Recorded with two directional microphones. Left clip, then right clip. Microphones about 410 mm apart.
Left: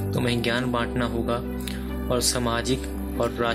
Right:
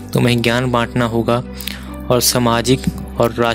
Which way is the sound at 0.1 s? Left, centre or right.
Centre.